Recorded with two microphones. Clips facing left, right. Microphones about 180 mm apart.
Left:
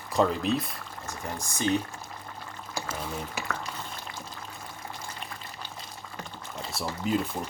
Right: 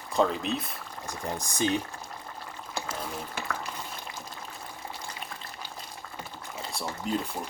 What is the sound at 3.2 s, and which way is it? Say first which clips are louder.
Speech: left 1 dB; 5° left (ahead or behind).